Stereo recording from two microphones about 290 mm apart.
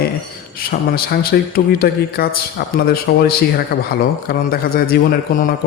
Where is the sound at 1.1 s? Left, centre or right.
Left.